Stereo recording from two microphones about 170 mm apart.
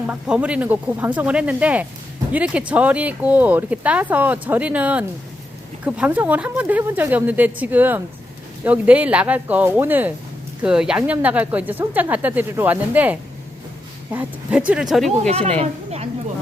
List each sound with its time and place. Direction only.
0.1 s speech: 5° right (ahead or behind)
15.2 s speech: 40° right (ahead or behind)